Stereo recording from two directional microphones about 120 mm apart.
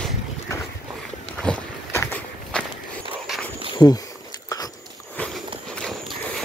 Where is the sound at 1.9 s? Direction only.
20° left (ahead or behind).